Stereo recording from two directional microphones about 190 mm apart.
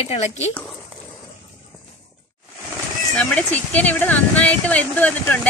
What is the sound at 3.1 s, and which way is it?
Speech, 5° left (ahead or behind).